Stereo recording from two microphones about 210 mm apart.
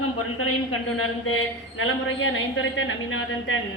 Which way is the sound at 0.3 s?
80° left.